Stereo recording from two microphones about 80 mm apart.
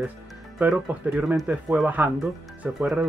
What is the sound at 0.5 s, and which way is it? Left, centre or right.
Speech, centre.